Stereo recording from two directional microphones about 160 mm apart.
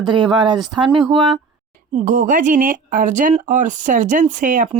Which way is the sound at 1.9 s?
50° right (ahead or behind).